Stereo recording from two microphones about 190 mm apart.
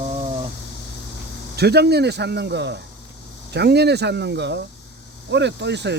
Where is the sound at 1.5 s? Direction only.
60° right (ahead or behind).